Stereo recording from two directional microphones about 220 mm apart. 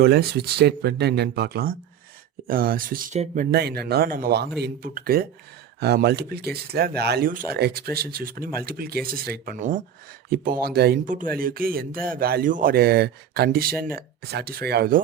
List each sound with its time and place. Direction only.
0.0 s speech: 45° right (ahead or behind)